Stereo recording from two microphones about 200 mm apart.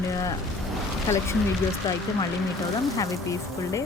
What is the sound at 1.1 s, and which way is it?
Speech, 15° left (ahead or behind).